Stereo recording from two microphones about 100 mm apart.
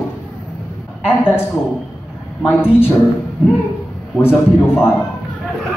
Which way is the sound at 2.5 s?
20° left (ahead or behind).